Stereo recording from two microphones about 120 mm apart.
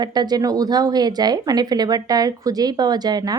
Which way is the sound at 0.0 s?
35° right (ahead or behind).